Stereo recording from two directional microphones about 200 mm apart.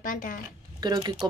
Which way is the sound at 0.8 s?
20° right (ahead or behind).